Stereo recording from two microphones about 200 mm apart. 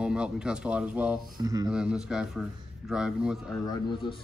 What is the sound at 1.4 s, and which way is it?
Speech, 20° right (ahead or behind).